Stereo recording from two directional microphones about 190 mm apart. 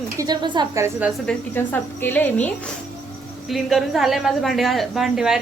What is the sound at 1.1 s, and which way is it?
A woman's voice, 5° left (ahead or behind).